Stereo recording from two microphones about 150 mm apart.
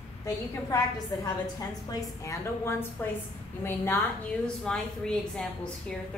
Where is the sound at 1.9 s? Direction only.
20° left (ahead or behind).